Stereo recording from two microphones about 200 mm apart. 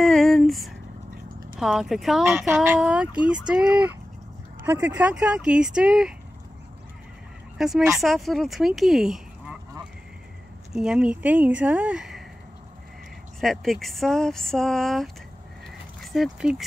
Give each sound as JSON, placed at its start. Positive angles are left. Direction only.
{"t": 0.0, "sound": "a sound", "side_deg": 0}
{"t": 1.6, "sound": "speech", "side_deg": 0}
{"t": 7.5, "sound": "speech", "side_deg": 0}
{"t": 10.7, "sound": "speech", "side_deg": -5}
{"t": 13.4, "sound": "speech", "side_deg": 0}